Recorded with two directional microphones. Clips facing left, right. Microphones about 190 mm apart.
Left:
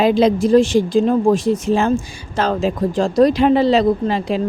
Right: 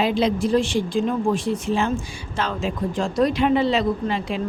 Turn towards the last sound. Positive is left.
turn(degrees=35)  # may be behind; listen again after turning